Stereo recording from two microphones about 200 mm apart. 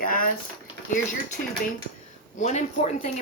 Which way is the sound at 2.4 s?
35° left (ahead or behind).